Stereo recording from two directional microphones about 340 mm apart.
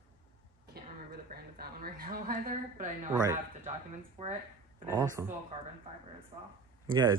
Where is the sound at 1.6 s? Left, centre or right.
Right.